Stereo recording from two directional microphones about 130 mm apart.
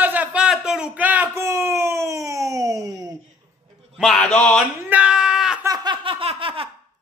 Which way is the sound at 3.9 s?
5° left (ahead or behind).